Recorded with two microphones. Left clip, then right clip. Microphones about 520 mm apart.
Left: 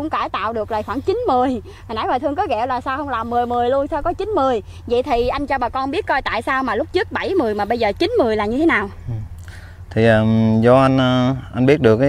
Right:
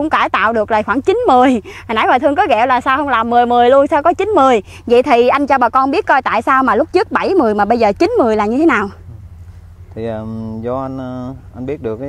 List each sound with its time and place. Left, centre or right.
0.0 s speech: right
9.9 s speech: left
10.2 s speech: left
10.6 s speech: left